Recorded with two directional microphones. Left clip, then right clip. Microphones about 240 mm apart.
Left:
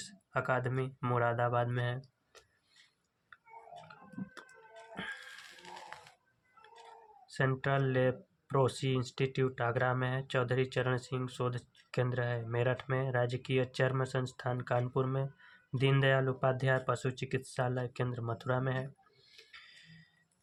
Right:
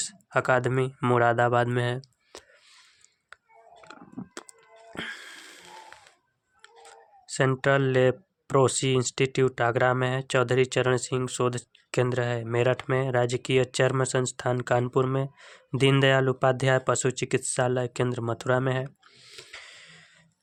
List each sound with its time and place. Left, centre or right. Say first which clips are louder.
0.0 s speech: right 10 dB; right
3.9 s a sound: right 8 dB; right
4.9 s music: right 7 dB; right
7.3 s speech: right 10 dB; right